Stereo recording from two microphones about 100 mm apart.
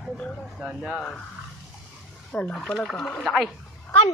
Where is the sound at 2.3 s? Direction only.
15° left (ahead or behind).